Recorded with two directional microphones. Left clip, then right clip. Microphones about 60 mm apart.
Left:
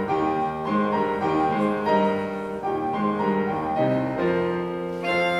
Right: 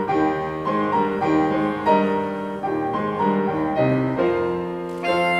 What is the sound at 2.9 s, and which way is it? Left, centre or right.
Music, right.